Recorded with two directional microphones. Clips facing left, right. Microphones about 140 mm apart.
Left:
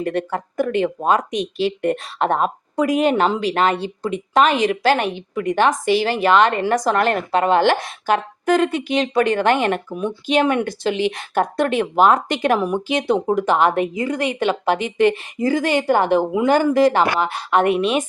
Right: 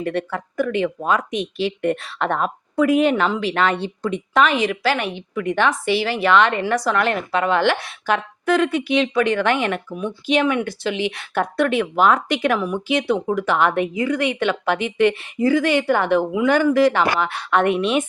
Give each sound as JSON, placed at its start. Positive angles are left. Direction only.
{"t": 0.0, "sound": "a woman's voice", "side_deg": 40}